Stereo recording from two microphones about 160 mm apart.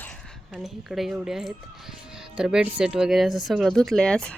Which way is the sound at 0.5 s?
Centre (ahead or behind).